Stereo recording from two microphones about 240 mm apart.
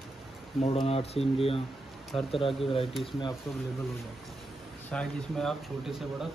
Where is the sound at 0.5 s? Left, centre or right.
Left.